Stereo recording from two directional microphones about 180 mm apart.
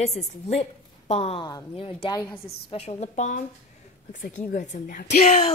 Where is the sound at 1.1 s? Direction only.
35° left (ahead or behind).